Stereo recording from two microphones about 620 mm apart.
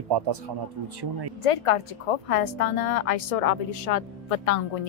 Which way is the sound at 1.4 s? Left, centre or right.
Left.